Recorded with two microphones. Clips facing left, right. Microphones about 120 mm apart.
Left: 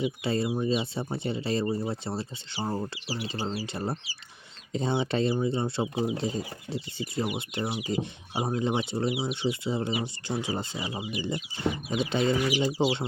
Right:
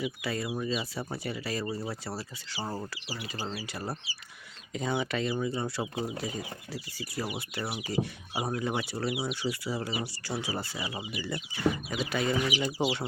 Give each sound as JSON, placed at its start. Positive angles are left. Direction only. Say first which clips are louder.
{"t": 0.0, "sound": "speech", "louder": "left 5 dB", "side_deg": 25}